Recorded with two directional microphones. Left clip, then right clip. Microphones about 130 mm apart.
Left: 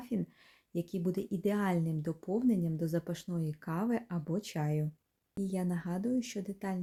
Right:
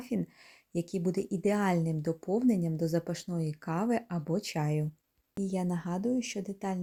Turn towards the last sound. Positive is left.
turn(degrees=-20)  # may be behind; listen again after turning